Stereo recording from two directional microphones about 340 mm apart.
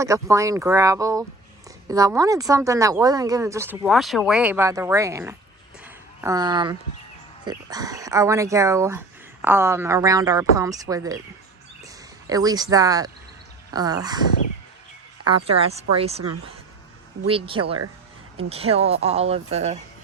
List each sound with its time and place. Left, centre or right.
0.0 s speech: centre
5.8 s a sound: centre
7.4 s speech: centre
11.8 s a sound: centre
13.7 s speech: centre
15.4 s speech: centre